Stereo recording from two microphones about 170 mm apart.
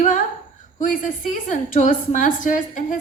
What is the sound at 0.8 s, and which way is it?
A woman's voice, 50° left (ahead or behind).